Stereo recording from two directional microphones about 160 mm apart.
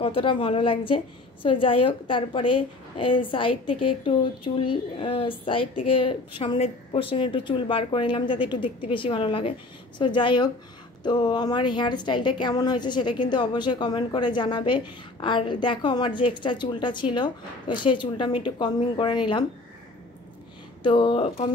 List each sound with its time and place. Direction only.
0.0 s a woman's voice: 35° left (ahead or behind)
20.8 s a woman's voice: 30° left (ahead or behind)